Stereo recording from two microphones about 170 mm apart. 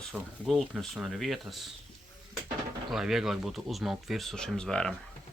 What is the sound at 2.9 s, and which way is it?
Speech, centre (ahead or behind).